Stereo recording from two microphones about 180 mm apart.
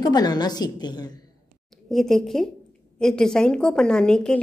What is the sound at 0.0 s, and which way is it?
A woman's voice, 20° left (ahead or behind).